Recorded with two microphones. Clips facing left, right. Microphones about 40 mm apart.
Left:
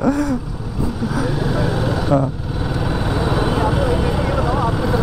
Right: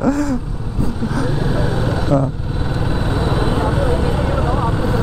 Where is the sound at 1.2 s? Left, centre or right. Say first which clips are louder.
Left 1 dB; centre.